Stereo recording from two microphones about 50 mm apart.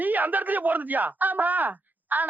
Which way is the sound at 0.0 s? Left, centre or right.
Right.